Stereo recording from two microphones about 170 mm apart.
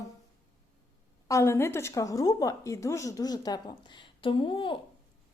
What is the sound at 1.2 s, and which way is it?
A woman's voice, 15° left (ahead or behind).